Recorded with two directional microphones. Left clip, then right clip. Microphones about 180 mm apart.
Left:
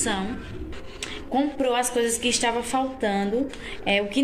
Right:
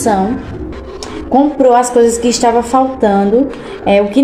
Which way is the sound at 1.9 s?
10° right (ahead or behind).